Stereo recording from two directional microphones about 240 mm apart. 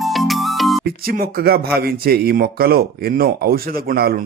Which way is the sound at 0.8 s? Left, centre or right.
Right.